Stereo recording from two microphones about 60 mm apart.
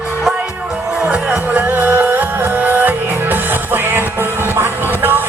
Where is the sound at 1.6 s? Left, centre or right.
Right.